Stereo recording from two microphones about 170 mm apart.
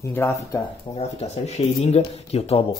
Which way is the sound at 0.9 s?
30° left (ahead or behind).